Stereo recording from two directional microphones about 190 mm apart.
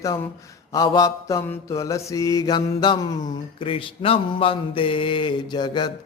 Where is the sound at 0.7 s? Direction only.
20° left (ahead or behind).